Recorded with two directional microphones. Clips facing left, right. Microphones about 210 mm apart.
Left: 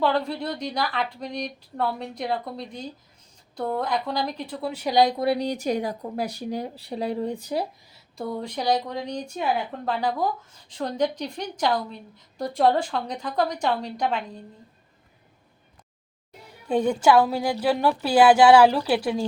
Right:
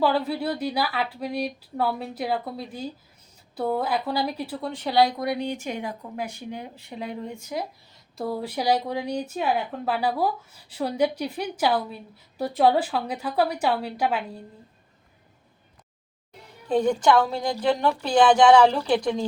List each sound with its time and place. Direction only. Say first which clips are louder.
0.0 s speech: right 1 dB; 5° right (ahead or behind)
4.6 s speech: left 1 dB; 10° left (ahead or behind); by 7.7 s 35° left (ahead or behind)
8.1 s speech: right 1 dB; 5° right (ahead or behind)
16.6 s a woman's voice: even; 10° left (ahead or behind)